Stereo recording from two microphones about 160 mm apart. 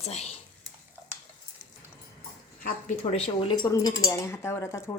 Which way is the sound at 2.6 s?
60° left (ahead or behind).